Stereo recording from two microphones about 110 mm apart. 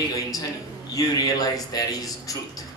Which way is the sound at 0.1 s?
35° left (ahead or behind).